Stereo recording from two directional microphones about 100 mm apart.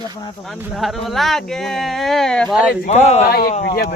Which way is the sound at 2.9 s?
90° left.